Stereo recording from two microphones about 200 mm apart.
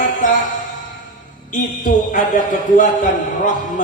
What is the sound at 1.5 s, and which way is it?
A man's voice, 40° left (ahead or behind).